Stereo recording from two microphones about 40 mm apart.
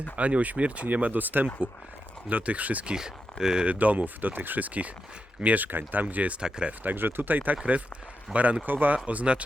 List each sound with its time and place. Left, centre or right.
0.2 s speech: right
0.9 s speech: right
2.3 s speech: right
2.8 s speech: centre
3.7 s speech: right
6.9 s speech: right
8.6 s speech: right
9.0 s speech: right